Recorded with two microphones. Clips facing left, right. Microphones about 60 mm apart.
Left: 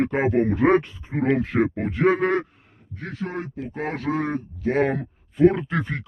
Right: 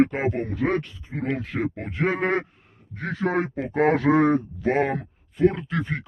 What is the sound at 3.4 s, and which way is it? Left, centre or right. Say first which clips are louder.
Speech: right 7 dB; right.